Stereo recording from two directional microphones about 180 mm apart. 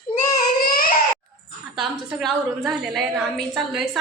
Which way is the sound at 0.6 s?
55° left (ahead or behind).